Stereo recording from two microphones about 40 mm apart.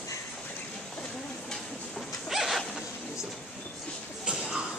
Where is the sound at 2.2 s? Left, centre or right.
Centre.